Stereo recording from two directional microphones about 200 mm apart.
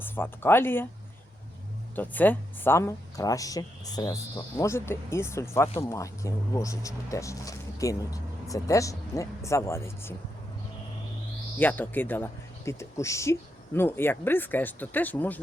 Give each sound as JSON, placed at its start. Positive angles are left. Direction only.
{"t": 0.0, "sound": "speech", "side_deg": 10}
{"t": 2.0, "sound": "speech", "side_deg": 10}
{"t": 11.5, "sound": "speech", "side_deg": 10}